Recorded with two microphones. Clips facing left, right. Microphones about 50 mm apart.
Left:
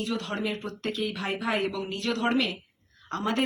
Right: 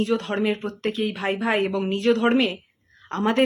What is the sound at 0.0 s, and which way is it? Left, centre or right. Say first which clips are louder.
Speech: right 8 dB; right.